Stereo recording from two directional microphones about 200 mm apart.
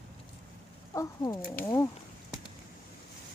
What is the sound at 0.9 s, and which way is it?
Speech, 15° left (ahead or behind).